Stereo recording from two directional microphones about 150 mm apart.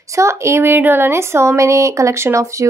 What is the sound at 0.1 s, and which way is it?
Speech, 20° right (ahead or behind).